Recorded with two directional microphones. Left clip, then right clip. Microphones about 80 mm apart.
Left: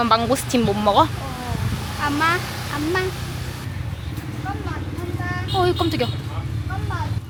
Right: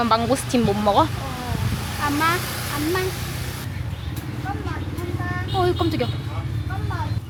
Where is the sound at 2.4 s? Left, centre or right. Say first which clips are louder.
Even; right.